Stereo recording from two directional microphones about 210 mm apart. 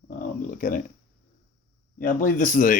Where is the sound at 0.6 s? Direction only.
40° left (ahead or behind).